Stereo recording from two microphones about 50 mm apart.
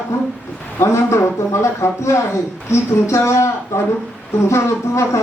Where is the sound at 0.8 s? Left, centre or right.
Left.